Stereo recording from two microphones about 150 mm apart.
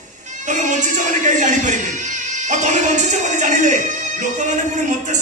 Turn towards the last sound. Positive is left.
turn(degrees=-55)  # may be behind; listen again after turning